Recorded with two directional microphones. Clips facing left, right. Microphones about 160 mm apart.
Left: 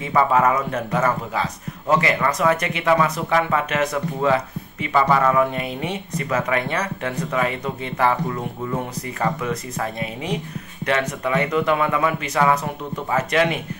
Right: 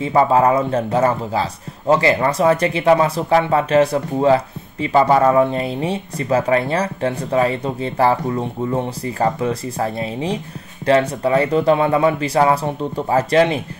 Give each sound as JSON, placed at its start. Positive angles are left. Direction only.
{"t": 0.0, "sound": "a man's voice", "side_deg": -30}